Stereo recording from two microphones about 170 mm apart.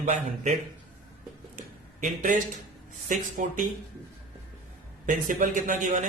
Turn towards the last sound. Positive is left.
turn(degrees=-45)  # may be behind; listen again after turning